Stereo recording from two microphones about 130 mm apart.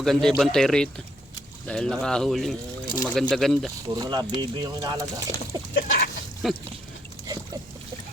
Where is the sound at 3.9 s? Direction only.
30° right (ahead or behind).